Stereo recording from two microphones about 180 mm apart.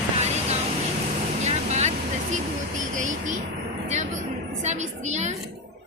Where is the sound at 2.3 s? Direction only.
45° right (ahead or behind).